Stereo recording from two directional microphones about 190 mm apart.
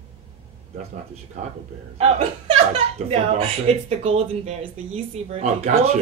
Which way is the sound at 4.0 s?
30° right (ahead or behind).